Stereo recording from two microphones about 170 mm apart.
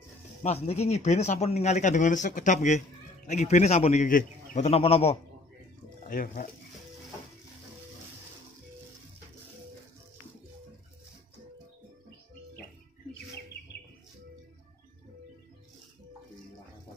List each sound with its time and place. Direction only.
0.4 s speech: 40° left (ahead or behind)
4.6 s a man's voice: 35° left (ahead or behind)
6.0 s speech: 55° left (ahead or behind)